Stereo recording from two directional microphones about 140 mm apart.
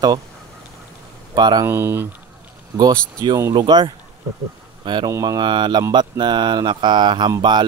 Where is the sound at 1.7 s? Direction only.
15° right (ahead or behind).